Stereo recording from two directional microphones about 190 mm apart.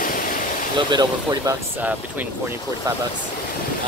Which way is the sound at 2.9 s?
20° right (ahead or behind).